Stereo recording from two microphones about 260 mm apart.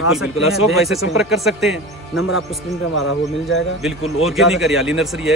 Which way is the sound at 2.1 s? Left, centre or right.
Left.